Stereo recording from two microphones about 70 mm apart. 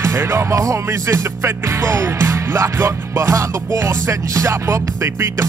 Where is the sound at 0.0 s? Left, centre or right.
Right.